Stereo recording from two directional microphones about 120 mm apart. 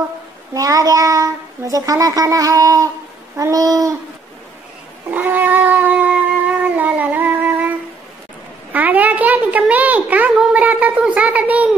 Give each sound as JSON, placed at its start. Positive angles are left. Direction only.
{"t": 0.6, "sound": "a child's voice", "side_deg": -30}
{"t": 5.1, "sound": "a child's voice", "side_deg": -15}
{"t": 6.6, "sound": "a sound", "side_deg": -15}
{"t": 8.7, "sound": "a child's voice", "side_deg": -15}